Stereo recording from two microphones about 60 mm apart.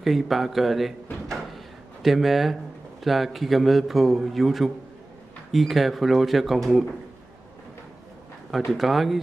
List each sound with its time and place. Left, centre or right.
0.0 s a man's voice: centre
2.0 s a man's voice: centre
8.7 s a man's voice: centre